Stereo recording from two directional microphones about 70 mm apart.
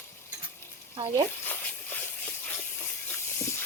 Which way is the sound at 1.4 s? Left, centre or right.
Left.